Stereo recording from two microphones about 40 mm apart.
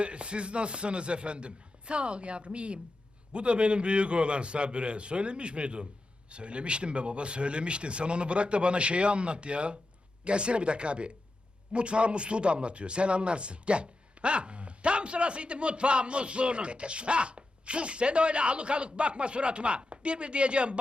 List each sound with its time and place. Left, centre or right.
0.0 s speech: right